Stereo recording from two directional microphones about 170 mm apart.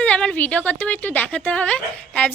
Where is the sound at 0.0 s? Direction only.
5° left (ahead or behind).